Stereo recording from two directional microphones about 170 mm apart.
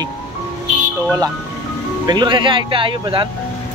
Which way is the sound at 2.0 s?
25° right (ahead or behind).